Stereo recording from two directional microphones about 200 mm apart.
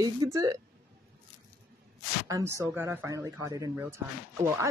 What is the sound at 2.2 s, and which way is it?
Speech, 15° right (ahead or behind).